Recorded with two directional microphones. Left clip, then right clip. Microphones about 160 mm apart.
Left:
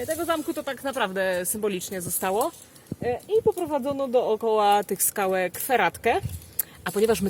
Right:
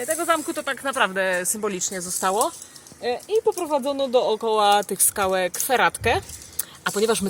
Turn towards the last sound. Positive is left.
turn(degrees=10)  # may be behind; listen again after turning